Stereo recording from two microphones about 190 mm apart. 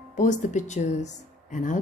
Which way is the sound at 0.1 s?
40° left (ahead or behind).